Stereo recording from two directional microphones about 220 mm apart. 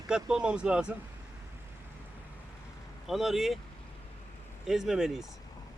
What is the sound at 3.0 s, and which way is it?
Speech, centre (ahead or behind).